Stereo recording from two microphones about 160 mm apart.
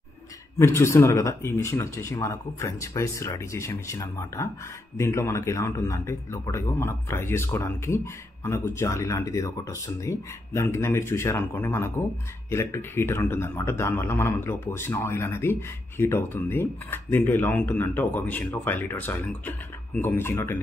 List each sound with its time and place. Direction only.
0.6 s speech: 15° left (ahead or behind)